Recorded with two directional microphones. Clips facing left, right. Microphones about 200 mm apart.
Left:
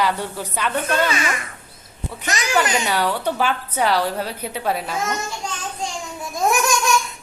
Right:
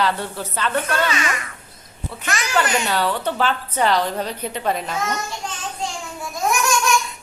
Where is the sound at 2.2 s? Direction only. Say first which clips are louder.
Left 1 dB; 20° left (ahead or behind).